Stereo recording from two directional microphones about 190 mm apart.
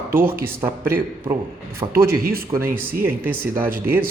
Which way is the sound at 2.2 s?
50° right (ahead or behind).